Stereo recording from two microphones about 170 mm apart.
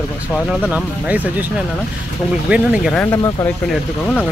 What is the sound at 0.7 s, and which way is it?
Speech, 10° right (ahead or behind).